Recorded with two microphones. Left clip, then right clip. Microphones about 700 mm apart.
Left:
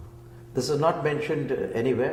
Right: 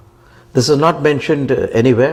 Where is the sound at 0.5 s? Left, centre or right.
Right.